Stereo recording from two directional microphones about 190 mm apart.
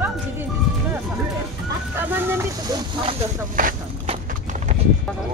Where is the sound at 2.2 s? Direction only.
15° right (ahead or behind).